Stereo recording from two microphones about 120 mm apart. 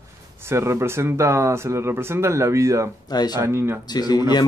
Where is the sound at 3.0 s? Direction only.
35° left (ahead or behind).